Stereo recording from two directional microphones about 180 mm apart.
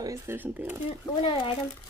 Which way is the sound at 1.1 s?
30° left (ahead or behind).